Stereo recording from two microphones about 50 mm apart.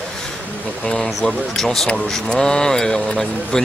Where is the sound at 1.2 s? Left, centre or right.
Centre.